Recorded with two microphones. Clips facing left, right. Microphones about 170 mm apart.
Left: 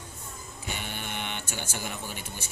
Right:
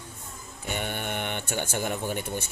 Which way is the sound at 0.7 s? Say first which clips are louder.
Right 6 dB; 55° right (ahead or behind).